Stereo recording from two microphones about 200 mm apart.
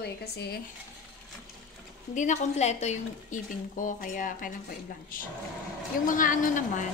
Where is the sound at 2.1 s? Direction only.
35° left (ahead or behind).